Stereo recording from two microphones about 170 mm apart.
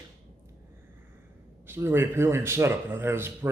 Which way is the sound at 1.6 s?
15° right (ahead or behind).